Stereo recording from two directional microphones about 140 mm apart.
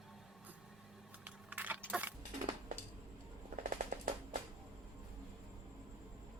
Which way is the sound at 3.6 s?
65° right (ahead or behind).